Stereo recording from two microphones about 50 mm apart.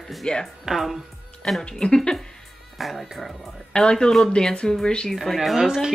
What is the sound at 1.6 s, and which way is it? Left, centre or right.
Speech, centre.